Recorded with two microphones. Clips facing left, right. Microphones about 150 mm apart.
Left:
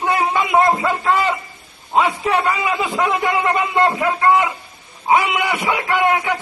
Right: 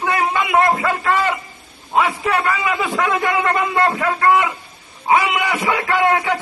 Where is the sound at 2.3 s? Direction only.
15° left (ahead or behind).